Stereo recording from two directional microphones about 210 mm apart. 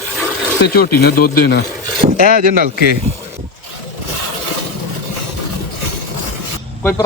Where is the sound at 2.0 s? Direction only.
45° right (ahead or behind).